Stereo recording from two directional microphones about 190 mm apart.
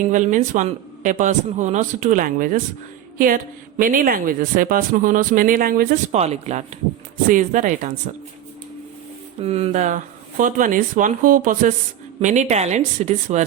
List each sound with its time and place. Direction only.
0.1 s a man's voice: 40° right (ahead or behind)
6.1 s a man's voice: 35° right (ahead or behind)
9.4 s a woman's voice: 30° right (ahead or behind)